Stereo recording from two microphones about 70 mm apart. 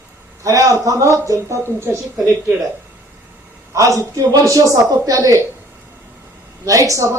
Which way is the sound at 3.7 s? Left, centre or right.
Right.